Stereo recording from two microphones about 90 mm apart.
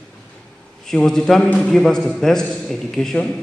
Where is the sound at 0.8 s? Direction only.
5° left (ahead or behind).